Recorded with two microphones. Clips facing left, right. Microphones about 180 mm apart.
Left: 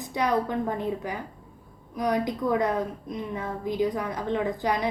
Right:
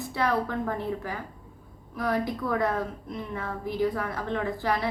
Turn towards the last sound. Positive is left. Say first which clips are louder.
# left 2 dB
turn(degrees=15)  # may be behind; listen again after turning